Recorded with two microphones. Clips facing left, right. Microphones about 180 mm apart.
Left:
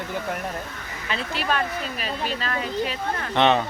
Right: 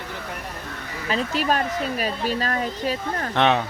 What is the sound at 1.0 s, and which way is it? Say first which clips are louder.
Speech: right 4 dB; 40° right (ahead or behind).